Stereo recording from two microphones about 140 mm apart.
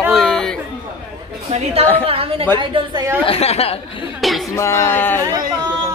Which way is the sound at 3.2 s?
45° left (ahead or behind).